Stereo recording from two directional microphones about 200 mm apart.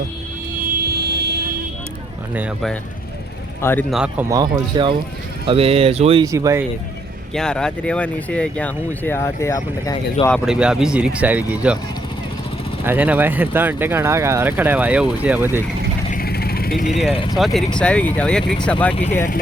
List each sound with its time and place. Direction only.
0.7 s vehicle: 50° right (ahead or behind)
2.3 s speech: 5° right (ahead or behind)
3.6 s speech: 10° left (ahead or behind)
3.9 s speech: 5° right (ahead or behind)
4.3 s speech: 20° right (ahead or behind)
5.5 s speech: 30° right (ahead or behind)
6.2 s speech: 15° right (ahead or behind)
7.3 s speech: 5° left (ahead or behind); by 10.2 s 20° left (ahead or behind)
10.2 s speech: centre (ahead or behind)
12.8 s speech: 10° right (ahead or behind)
16.1 s vehicle: 50° left (ahead or behind)
16.9 s speech: centre (ahead or behind)